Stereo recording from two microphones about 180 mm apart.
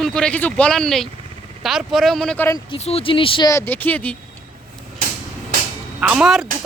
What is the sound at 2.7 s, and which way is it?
Speech, 35° left (ahead or behind).